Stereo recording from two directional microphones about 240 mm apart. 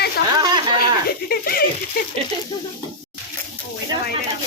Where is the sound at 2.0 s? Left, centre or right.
Left.